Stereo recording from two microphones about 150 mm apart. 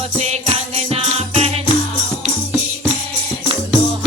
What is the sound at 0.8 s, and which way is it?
Music, 40° right (ahead or behind).